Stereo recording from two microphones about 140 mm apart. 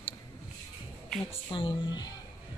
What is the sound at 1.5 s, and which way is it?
Speech, 35° left (ahead or behind).